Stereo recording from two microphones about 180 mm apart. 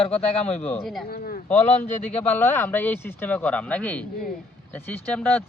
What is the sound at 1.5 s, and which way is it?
Speech, 10° left (ahead or behind).